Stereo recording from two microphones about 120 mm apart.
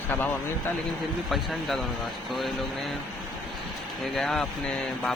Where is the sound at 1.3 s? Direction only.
Centre (ahead or behind).